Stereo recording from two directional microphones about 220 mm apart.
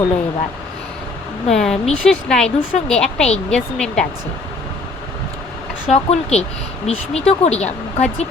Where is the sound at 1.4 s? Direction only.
Centre (ahead or behind).